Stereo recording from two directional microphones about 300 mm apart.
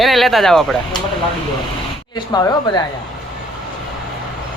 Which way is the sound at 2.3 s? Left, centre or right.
Centre.